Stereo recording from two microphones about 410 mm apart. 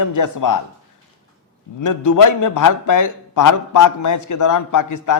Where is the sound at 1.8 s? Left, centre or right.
Left.